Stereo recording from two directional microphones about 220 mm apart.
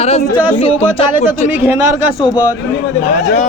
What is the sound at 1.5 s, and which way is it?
Speech, 5° right (ahead or behind).